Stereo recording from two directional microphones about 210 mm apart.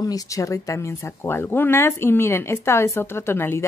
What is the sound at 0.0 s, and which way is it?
Speech, 15° left (ahead or behind).